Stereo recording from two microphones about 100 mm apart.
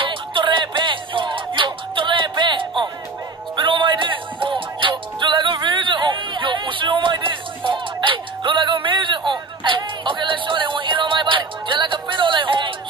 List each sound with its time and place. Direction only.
0.0 s music: 55° right (ahead or behind)